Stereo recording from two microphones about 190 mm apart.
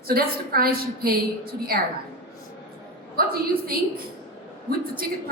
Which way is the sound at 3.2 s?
50° right (ahead or behind).